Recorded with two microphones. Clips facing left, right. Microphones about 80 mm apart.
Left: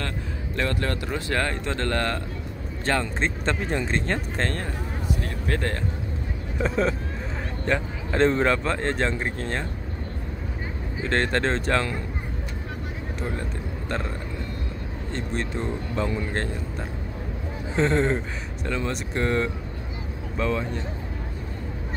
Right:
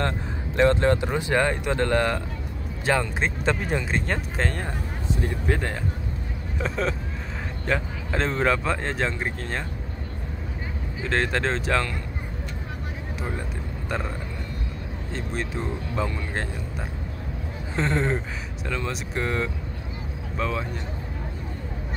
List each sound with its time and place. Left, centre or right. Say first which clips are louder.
0.6 s speech: right 8 dB; right
6.6 s speech: left 3 dB; centre
11.0 s speech: left 1 dB; centre
15.1 s speech: left 1 dB; centre
17.7 s speech: left 3 dB; centre